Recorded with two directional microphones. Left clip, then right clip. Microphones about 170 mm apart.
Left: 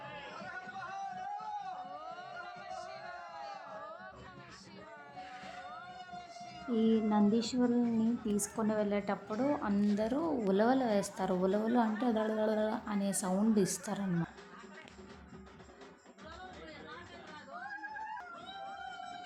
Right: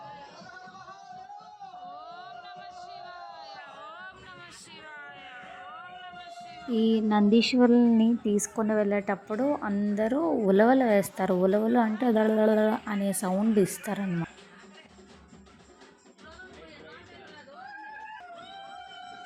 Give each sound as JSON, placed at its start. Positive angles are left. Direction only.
{"t": 1.9, "sound": "music", "side_deg": 20}
{"t": 6.7, "sound": "a woman's voice", "side_deg": -15}